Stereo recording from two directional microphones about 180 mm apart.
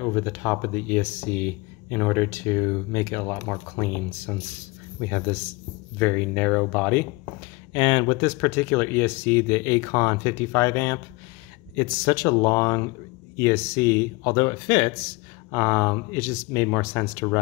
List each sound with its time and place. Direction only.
0.0 s speech: 10° left (ahead or behind)
7.7 s speech: 25° left (ahead or behind)